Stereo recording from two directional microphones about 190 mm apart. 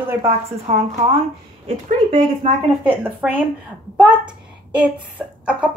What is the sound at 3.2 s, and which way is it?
Speech, 5° right (ahead or behind).